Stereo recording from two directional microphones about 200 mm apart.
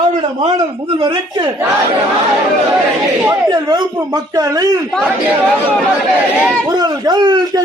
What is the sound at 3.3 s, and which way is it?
Speech, 20° right (ahead or behind).